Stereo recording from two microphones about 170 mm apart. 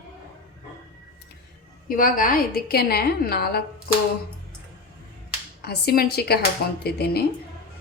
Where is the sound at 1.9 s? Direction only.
55° left (ahead or behind).